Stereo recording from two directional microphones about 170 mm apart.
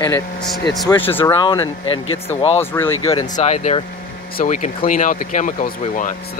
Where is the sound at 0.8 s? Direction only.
30° left (ahead or behind).